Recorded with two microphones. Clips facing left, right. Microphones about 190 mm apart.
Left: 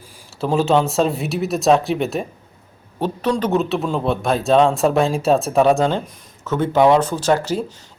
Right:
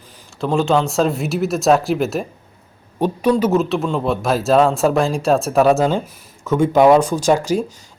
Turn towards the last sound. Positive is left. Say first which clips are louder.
# right 2 dB
turn(degrees=-10)  # may be behind; listen again after turning